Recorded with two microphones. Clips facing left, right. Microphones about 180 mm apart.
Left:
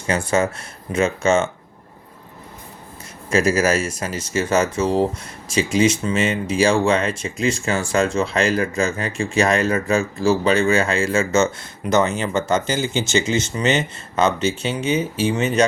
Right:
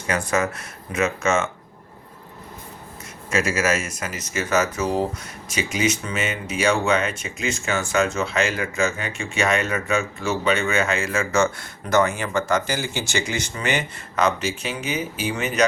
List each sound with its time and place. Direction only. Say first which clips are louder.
0.1 s speech: left 3 dB; 30° left (ahead or behind)
3.2 s speech: left 5 dB; 35° left (ahead or behind)